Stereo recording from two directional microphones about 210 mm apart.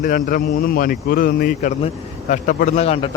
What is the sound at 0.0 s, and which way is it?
Speech, 40° left (ahead or behind).